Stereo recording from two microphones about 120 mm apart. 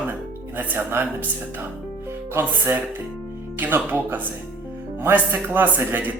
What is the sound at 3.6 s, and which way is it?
Speech, 15° right (ahead or behind).